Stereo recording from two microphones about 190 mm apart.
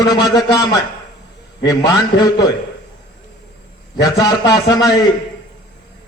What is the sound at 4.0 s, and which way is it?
Speech, 20° left (ahead or behind).